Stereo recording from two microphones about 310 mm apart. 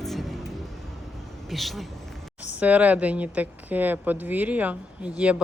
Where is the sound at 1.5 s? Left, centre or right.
Centre.